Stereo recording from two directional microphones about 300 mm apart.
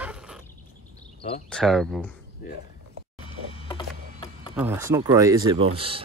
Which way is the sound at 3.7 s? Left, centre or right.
Centre.